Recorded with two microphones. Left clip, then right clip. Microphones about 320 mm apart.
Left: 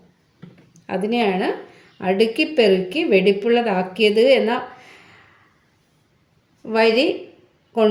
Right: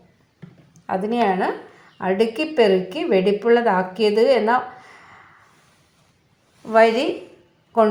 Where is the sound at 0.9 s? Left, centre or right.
Centre.